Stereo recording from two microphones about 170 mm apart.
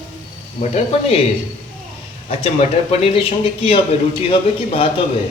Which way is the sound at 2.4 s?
35° left (ahead or behind).